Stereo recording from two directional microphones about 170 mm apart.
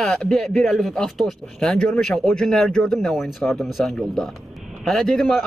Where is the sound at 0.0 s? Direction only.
Centre (ahead or behind).